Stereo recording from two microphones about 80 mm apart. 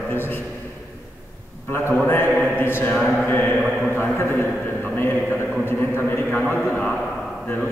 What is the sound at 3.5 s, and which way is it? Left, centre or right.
Speech, centre.